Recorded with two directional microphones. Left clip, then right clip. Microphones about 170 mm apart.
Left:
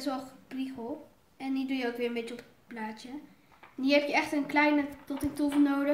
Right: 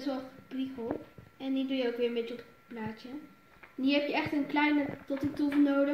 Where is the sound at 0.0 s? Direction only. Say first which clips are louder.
Left 1 dB; 20° left (ahead or behind).